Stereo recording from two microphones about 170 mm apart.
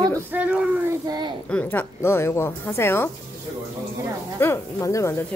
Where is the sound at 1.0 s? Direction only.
25° right (ahead or behind).